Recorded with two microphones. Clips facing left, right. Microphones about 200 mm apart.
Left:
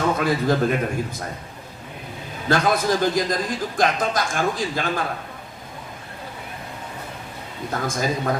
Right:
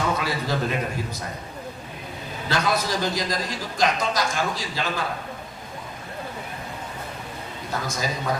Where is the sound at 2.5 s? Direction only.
50° left (ahead or behind).